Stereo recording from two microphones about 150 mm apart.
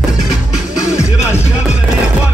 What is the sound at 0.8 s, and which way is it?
Music, 15° left (ahead or behind).